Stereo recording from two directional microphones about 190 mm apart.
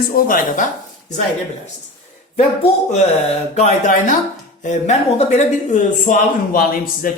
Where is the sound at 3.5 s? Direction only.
40° left (ahead or behind).